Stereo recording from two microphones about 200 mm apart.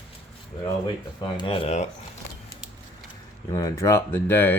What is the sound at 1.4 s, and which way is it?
Speech, 25° left (ahead or behind).